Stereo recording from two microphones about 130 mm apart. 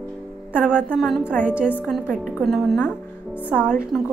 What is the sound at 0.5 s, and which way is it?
A woman's voice, 10° right (ahead or behind).